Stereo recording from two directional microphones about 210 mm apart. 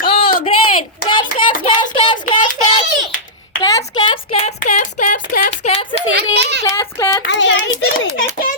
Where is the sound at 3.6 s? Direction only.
20° left (ahead or behind); by 5.5 s 40° left (ahead or behind).